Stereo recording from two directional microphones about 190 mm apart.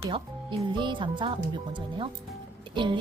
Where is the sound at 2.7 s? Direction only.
25° right (ahead or behind).